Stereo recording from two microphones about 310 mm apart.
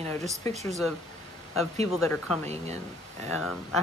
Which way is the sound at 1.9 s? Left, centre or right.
Centre.